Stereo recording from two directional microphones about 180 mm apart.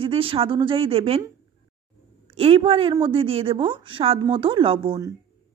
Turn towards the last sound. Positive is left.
turn(degrees=-30)  # may be behind; listen again after turning